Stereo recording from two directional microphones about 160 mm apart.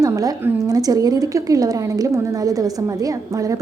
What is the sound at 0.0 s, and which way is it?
A woman's voice, 20° right (ahead or behind).